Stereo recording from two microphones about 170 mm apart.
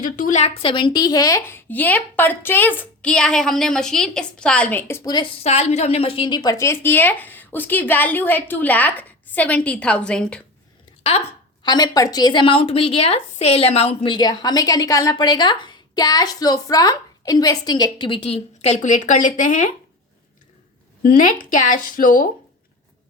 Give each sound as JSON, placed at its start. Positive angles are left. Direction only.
{"t": 0.0, "sound": "a woman's voice", "side_deg": 50}
{"t": 11.6, "sound": "speech", "side_deg": 25}
{"t": 21.5, "sound": "speech", "side_deg": 50}